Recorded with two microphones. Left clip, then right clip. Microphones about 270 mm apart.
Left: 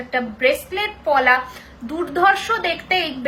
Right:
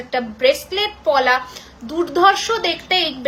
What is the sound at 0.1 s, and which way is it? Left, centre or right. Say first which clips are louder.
A woman's voice: right 2 dB; centre.